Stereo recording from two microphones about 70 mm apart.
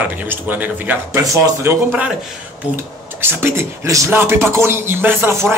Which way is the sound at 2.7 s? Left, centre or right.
Right.